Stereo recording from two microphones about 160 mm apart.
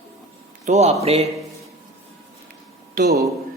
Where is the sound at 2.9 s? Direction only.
85° right.